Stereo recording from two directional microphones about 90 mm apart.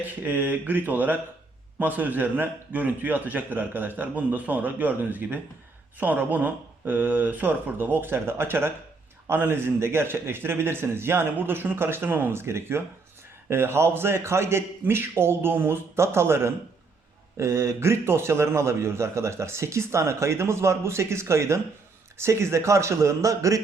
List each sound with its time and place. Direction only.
0.3 s a man's voice: 20° right (ahead or behind); by 23.6 s 35° right (ahead or behind)